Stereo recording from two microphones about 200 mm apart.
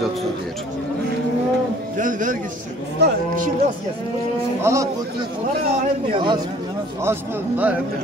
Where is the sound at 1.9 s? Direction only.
40° right (ahead or behind).